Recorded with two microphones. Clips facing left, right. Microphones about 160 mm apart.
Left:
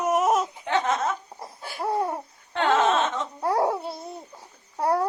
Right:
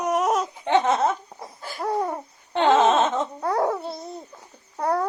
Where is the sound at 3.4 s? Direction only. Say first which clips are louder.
Left 2 dB; 10° left (ahead or behind).